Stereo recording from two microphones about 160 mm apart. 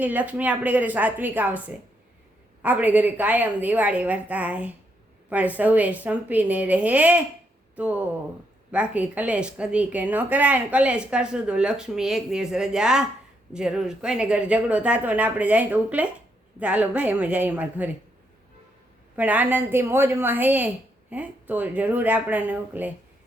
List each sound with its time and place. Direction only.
0.0 s a woman's voice: 10° right (ahead or behind)
19.1 s a woman's voice: 10° right (ahead or behind)